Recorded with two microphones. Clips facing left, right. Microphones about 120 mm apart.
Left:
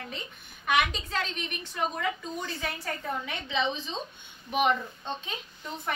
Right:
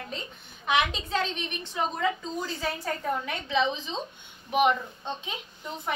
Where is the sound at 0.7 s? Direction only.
25° right (ahead or behind).